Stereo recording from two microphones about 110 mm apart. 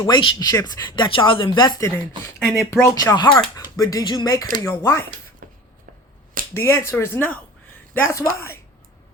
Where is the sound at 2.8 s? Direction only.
30° left (ahead or behind).